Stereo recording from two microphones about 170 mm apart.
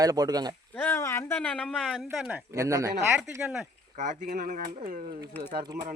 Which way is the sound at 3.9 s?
45° right (ahead or behind).